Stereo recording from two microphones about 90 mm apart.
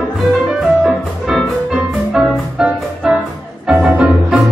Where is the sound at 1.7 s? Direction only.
10° right (ahead or behind).